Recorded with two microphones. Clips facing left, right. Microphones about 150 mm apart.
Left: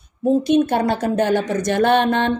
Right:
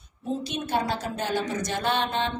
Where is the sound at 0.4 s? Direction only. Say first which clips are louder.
Left 10 dB; 55° left (ahead or behind).